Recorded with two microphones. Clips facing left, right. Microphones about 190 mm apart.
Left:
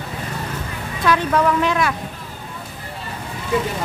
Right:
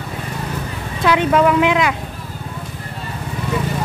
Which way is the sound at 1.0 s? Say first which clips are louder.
Right 3 dB; 15° right (ahead or behind).